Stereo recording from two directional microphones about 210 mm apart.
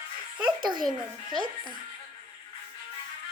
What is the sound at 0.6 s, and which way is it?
Speech, 20° right (ahead or behind).